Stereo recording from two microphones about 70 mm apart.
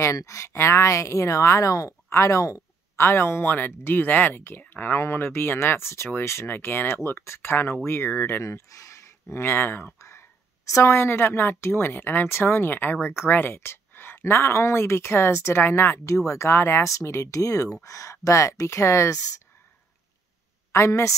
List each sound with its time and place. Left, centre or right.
0.0 s speech: left
3.1 s a woman's voice: left
9.9 s a woman's voice: left
20.7 s speech: left